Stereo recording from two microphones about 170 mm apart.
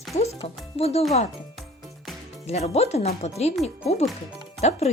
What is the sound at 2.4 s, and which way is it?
Speech, 40° left (ahead or behind).